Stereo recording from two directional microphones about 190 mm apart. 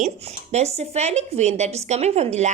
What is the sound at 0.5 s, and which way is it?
A woman's voice, 35° right (ahead or behind).